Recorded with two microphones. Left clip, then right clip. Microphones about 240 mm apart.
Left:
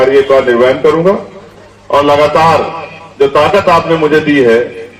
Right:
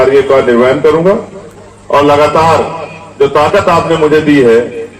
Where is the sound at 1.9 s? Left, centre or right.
Left.